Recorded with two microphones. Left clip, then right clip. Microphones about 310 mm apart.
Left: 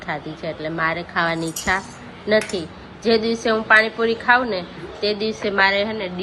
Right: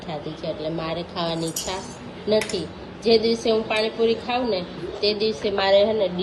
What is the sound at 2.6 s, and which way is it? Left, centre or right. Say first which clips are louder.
Speech: left 1 dB; centre.